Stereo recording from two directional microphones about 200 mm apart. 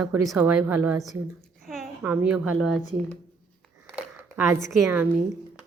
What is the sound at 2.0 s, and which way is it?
Speech, 10° right (ahead or behind).